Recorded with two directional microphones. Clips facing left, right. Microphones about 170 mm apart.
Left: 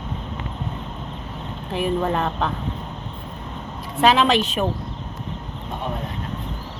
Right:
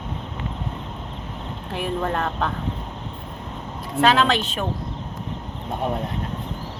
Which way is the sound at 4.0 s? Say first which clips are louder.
Left 1 dB; 10° left (ahead or behind).